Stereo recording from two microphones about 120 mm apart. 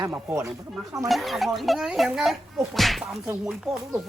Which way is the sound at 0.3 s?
25° right (ahead or behind).